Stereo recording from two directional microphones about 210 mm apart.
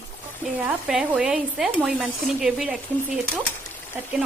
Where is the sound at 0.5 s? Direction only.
10° right (ahead or behind).